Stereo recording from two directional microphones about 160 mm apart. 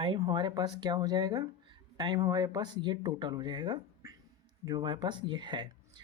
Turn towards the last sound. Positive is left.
turn(degrees=-30)  # may be behind; listen again after turning